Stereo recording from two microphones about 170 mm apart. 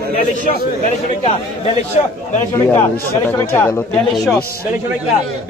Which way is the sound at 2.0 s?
40° left (ahead or behind).